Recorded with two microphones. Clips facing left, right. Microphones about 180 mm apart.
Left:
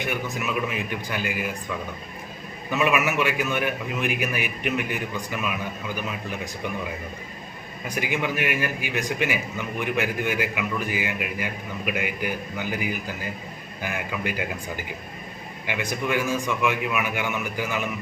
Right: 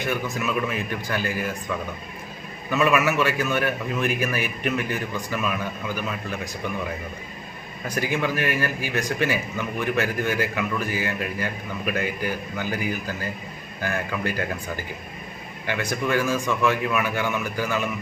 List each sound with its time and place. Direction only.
0.0 s a man's voice: 15° left (ahead or behind)
2.6 s a man's voice: 15° left (ahead or behind)
7.9 s a man's voice: 15° left (ahead or behind)
15.6 s a man's voice: 15° left (ahead or behind)